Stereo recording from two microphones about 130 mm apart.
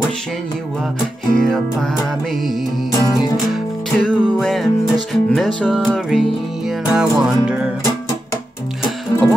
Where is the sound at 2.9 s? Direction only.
30° left (ahead or behind).